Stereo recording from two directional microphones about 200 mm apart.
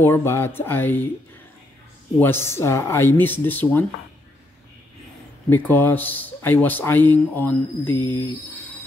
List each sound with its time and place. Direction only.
0.0 s a man's voice: 10° left (ahead or behind)
2.1 s a man's voice: 10° left (ahead or behind)
5.5 s a man's voice: 10° left (ahead or behind)